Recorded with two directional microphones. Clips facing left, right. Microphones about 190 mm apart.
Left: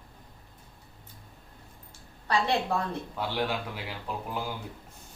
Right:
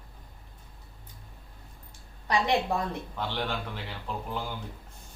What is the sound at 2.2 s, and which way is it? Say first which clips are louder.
Speech: right 1 dB; 15° right (ahead or behind).